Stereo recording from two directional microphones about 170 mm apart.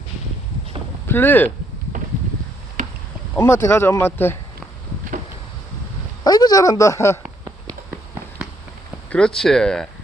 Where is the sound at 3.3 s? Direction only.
15° left (ahead or behind).